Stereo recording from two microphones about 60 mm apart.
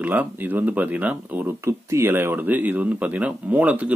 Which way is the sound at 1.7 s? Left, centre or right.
Right.